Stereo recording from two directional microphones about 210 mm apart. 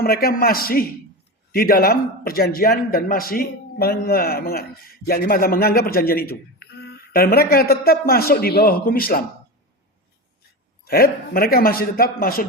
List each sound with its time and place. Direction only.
0.0 s a man's voice: 45° left (ahead or behind)
10.8 s a man's voice: 45° left (ahead or behind)